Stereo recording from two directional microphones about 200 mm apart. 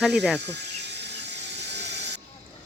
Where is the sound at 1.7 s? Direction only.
60° right (ahead or behind).